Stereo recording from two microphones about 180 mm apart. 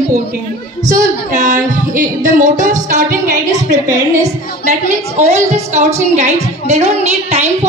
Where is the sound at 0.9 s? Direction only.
45° right (ahead or behind).